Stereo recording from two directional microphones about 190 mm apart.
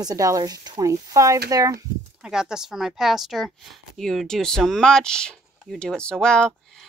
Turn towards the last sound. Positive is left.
turn(degrees=5)  # may be behind; listen again after turning